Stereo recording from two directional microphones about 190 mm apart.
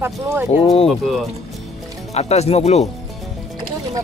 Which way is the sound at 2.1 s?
35° left (ahead or behind).